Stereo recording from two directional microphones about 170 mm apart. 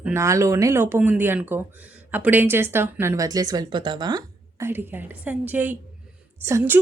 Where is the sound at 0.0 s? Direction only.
15° right (ahead or behind).